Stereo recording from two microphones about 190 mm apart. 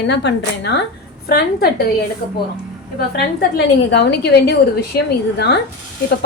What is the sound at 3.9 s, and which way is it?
A woman's voice, 60° left (ahead or behind).